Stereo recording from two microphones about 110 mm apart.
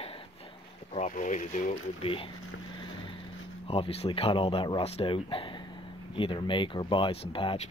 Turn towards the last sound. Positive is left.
turn(degrees=50)  # may be behind; listen again after turning